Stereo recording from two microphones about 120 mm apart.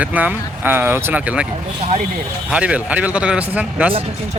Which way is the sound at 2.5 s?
10° right (ahead or behind).